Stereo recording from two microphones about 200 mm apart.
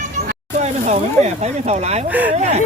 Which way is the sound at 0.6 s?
35° right (ahead or behind).